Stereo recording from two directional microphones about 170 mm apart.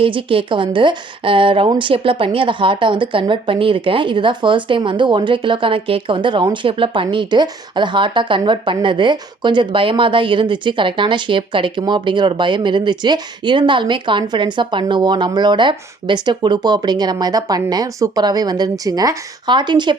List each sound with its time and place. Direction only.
0.0 s a woman's voice: 30° right (ahead or behind)